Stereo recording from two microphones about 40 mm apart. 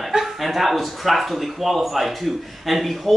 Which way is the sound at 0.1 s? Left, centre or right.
Centre.